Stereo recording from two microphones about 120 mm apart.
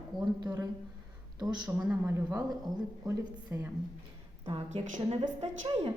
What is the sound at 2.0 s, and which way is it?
A woman's voice, 25° right (ahead or behind).